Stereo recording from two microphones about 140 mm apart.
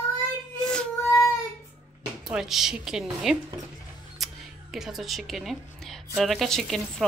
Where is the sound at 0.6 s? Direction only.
5° left (ahead or behind).